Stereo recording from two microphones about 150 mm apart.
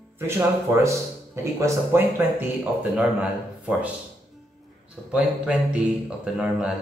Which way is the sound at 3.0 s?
5° right (ahead or behind).